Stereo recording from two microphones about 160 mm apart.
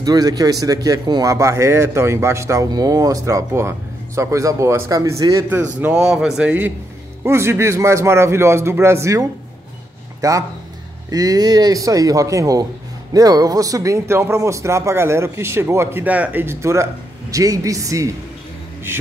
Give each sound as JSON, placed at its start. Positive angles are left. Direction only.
{"t": 0.0, "sound": "a man's voice", "side_deg": -25}
{"t": 5.8, "sound": "a man's voice", "side_deg": -5}